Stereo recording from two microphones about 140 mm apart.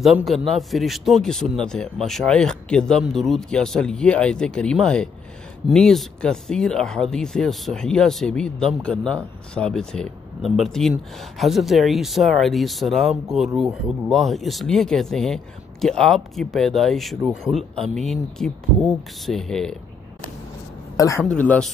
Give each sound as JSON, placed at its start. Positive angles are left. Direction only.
{"t": 0.0, "sound": "speech", "side_deg": 0}
{"t": 20.9, "sound": "a man's voice", "side_deg": 20}
{"t": 21.3, "sound": "speech", "side_deg": 10}